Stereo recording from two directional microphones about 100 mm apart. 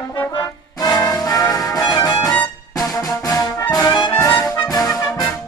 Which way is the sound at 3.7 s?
45° left (ahead or behind).